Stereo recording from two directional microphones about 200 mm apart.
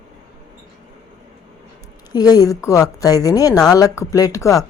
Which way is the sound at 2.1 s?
20° left (ahead or behind).